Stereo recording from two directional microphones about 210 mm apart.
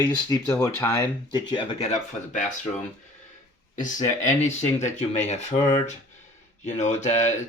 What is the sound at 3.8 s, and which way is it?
Speech, 35° left (ahead or behind).